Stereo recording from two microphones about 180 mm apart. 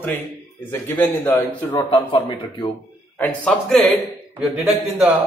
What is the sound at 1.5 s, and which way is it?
Speech, 25° left (ahead or behind).